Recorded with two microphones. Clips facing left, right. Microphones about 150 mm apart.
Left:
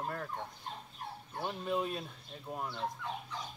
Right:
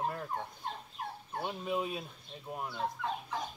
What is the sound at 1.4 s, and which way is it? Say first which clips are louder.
Speech: even; 5° right (ahead or behind).